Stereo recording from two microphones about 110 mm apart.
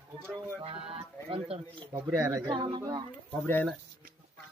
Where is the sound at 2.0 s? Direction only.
25° right (ahead or behind).